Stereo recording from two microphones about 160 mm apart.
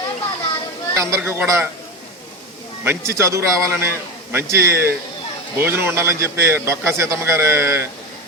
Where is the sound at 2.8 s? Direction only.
15° right (ahead or behind).